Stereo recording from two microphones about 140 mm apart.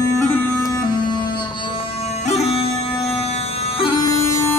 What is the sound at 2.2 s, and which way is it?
Music, 50° left (ahead or behind).